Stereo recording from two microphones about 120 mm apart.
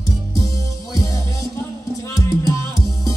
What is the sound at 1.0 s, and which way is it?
Music, 25° left (ahead or behind).